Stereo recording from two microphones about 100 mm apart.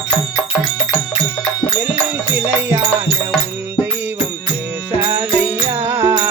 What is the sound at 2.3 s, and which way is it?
Music, 20° right (ahead or behind).